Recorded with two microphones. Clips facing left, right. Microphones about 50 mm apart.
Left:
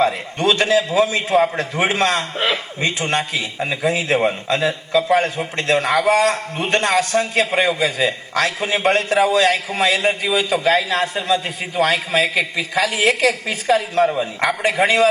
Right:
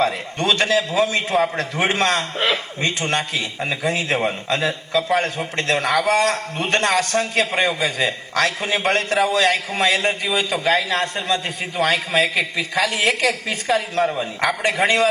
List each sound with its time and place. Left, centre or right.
0.0 s a man's voice: centre